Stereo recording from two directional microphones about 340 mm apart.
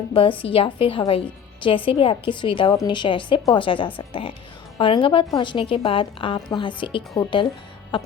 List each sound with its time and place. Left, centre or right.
0.1 s a woman's voice: centre